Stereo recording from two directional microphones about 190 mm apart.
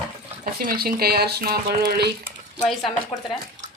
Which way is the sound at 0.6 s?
50° right (ahead or behind).